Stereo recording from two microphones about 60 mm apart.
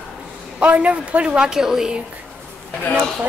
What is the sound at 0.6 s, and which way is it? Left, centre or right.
A woman's voice, right.